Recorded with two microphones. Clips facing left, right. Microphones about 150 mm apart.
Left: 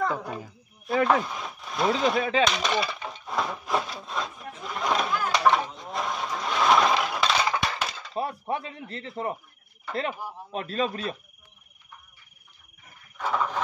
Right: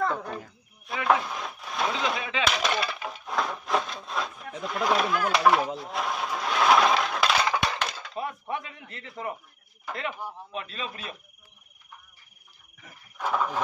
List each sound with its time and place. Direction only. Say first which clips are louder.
0.0 s a sound: even; 5° left (ahead or behind)
1.0 s speech: right 3 dB; centre (ahead or behind)
2.0 s a man's voice: left 6 dB; 40° left (ahead or behind)
2.4 s wood: left 2 dB; centre (ahead or behind)
8.1 s speech: left 3 dB; 35° left (ahead or behind)
10.5 s a man's voice: left 11 dB; 40° left (ahead or behind)
13.2 s a sound: even; 5° right (ahead or behind)